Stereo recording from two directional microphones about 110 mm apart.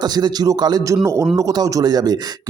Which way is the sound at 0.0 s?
40° right (ahead or behind).